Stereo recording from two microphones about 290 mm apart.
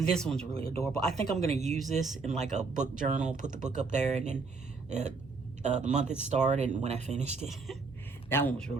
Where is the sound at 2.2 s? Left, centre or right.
Right.